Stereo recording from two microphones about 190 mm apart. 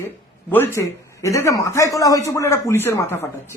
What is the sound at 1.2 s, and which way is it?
A man's voice, 15° left (ahead or behind).